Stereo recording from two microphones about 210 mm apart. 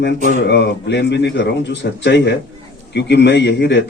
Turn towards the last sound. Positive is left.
turn(degrees=55)  # may be behind; listen again after turning